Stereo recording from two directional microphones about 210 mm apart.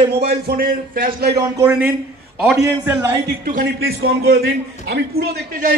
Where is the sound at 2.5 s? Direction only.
15° right (ahead or behind).